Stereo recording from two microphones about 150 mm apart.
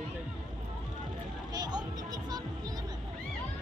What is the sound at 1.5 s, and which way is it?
Speech, 25° right (ahead or behind).